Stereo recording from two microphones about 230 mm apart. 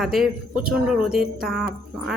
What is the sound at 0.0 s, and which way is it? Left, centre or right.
Speech, centre.